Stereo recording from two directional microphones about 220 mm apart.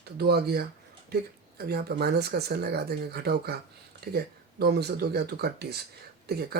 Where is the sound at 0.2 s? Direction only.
45° right (ahead or behind).